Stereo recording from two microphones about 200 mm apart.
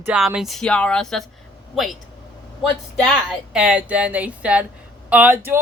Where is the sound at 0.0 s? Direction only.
5° right (ahead or behind).